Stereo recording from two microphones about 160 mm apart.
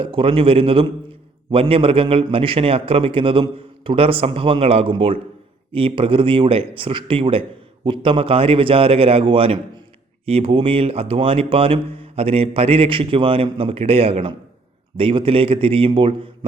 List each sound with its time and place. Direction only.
0.0 s a man's voice: 35° right (ahead or behind)